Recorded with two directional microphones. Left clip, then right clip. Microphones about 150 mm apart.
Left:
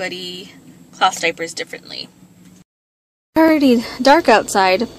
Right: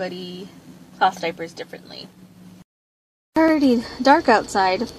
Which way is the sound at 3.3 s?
20° left (ahead or behind).